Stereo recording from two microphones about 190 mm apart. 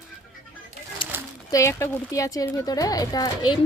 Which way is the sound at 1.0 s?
25° left (ahead or behind).